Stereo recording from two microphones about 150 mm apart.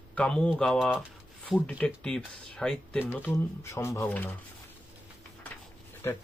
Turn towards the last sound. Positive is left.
turn(degrees=20)  # may be behind; listen again after turning